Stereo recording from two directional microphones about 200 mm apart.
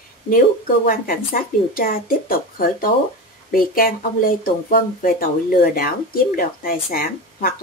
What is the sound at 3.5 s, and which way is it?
Speech, 45° left (ahead or behind).